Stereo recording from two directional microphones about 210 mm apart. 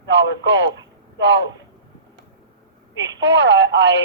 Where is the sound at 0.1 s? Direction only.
55° right (ahead or behind).